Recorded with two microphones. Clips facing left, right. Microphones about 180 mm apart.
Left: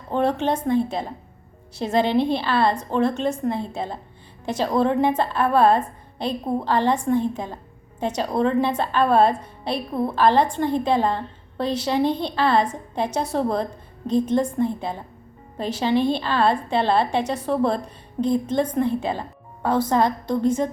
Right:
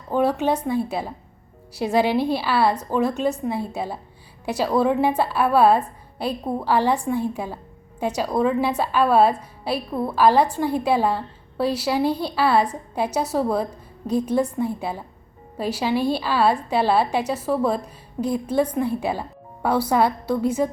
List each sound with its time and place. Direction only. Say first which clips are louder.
0.1 s a woman's voice: right 1 dB; 5° right (ahead or behind)